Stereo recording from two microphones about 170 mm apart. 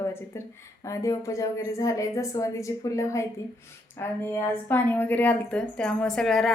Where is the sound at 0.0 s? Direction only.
15° left (ahead or behind).